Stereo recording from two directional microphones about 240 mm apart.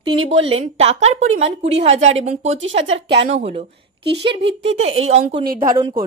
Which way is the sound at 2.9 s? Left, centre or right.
Right.